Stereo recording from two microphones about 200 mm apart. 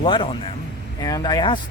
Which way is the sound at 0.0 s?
25° left (ahead or behind).